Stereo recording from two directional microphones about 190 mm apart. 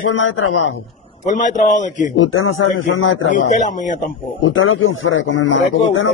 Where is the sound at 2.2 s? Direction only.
90° left.